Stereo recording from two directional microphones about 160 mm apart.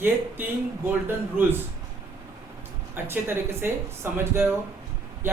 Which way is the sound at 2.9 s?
15° right (ahead or behind).